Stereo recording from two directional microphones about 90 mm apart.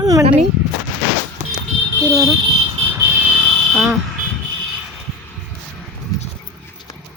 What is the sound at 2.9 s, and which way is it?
Vehicle, 30° right (ahead or behind).